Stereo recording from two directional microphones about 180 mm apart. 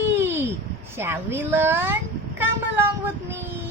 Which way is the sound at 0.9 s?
15° right (ahead or behind).